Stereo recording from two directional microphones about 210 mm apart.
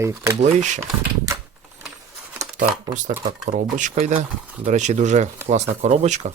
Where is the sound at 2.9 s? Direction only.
35° right (ahead or behind).